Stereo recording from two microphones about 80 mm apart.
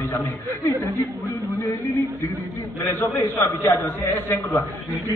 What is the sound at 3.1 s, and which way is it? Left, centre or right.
A man's voice, left.